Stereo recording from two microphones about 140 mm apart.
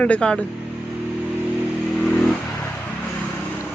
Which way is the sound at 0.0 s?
10° left (ahead or behind).